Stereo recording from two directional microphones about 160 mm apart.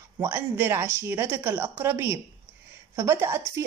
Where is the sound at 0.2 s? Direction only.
15° right (ahead or behind).